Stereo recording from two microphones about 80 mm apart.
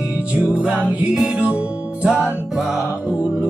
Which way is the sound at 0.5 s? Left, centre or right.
Centre.